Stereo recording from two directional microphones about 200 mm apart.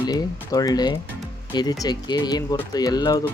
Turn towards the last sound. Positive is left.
turn(degrees=20)  # may be behind; listen again after turning